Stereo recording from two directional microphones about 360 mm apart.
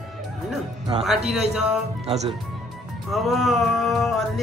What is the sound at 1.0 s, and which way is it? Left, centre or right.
Music, centre.